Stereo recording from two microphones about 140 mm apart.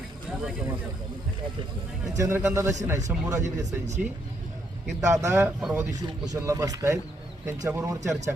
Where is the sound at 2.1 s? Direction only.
20° right (ahead or behind).